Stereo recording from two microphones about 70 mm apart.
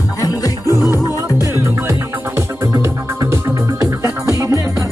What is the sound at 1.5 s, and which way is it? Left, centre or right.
Music, right.